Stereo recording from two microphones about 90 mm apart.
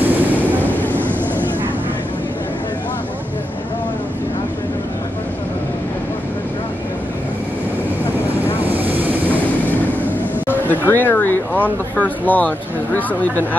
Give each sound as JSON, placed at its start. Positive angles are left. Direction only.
{"t": 0.0, "sound": "vehicle", "side_deg": -20}
{"t": 0.7, "sound": "vehicle", "side_deg": 20}
{"t": 0.9, "sound": "vehicle", "side_deg": -20}
{"t": 8.5, "sound": "vehicle", "side_deg": -20}
{"t": 10.4, "sound": "speech", "side_deg": 20}